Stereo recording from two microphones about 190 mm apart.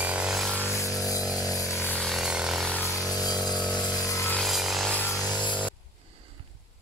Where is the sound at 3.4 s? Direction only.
Centre (ahead or behind).